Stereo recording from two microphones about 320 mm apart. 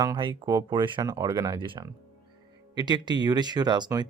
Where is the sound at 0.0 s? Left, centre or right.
Centre.